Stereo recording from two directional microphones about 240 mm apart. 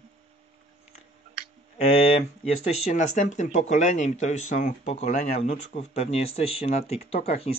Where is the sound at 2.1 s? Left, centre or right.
Left.